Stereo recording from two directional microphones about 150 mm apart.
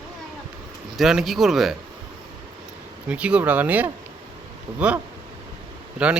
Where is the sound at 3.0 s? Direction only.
10° right (ahead or behind).